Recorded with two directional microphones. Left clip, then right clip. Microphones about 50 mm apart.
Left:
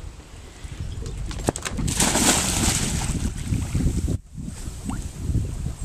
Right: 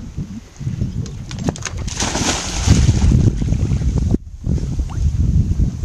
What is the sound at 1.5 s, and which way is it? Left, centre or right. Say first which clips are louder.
Horse: right 2 dB; right.